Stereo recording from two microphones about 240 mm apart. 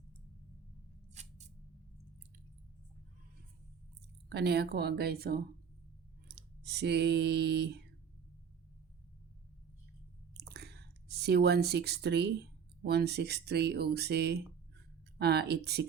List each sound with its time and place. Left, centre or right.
1.1 s scissors: right
4.3 s speech: right
10.5 s speech: right